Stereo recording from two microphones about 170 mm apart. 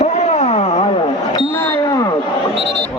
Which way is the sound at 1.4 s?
25° left (ahead or behind).